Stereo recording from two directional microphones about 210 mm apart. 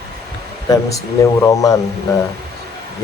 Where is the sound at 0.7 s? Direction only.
15° left (ahead or behind).